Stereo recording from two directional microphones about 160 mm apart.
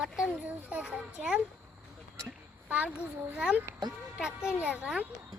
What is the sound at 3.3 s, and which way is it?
A child's voice, 10° right (ahead or behind).